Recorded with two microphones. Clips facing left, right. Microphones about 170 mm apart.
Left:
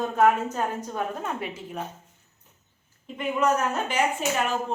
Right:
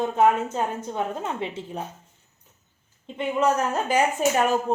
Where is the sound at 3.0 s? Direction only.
30° right (ahead or behind).